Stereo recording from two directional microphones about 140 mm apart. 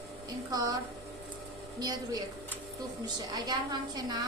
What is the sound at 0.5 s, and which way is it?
Speech, 25° right (ahead or behind).